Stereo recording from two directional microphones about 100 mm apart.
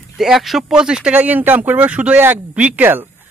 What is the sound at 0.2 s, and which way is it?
Speech, centre (ahead or behind).